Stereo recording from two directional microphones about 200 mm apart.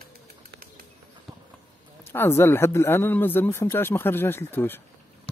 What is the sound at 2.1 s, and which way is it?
Speech, 10° left (ahead or behind).